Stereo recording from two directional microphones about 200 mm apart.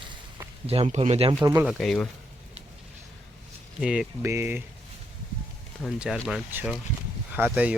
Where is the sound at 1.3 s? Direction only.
10° right (ahead or behind).